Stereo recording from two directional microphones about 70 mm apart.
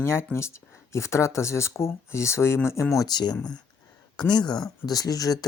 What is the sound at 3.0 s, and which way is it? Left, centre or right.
Speech, left.